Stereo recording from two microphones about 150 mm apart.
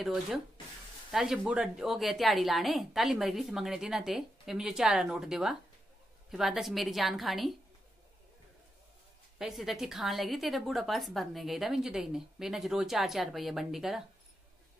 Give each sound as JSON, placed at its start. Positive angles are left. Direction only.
{"t": 0.0, "sound": "a woman's voice", "side_deg": 0}
{"t": 9.4, "sound": "a woman's voice", "side_deg": 0}